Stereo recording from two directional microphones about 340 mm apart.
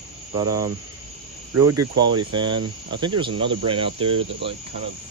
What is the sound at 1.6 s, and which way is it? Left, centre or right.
Cricket, right.